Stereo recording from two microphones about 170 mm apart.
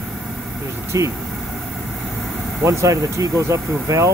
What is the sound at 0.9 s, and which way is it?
Speech, 20° right (ahead or behind).